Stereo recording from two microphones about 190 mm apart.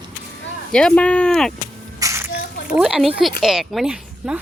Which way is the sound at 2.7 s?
5° right (ahead or behind).